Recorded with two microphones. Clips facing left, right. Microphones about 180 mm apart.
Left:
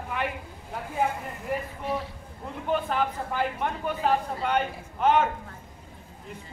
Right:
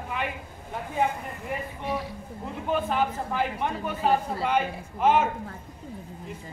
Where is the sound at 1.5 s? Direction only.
Centre (ahead or behind).